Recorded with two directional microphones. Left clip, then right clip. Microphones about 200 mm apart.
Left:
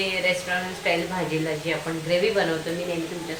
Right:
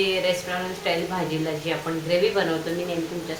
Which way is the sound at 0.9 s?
10° right (ahead or behind).